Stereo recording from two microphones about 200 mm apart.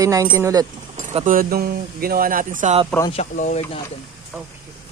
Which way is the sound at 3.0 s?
30° left (ahead or behind).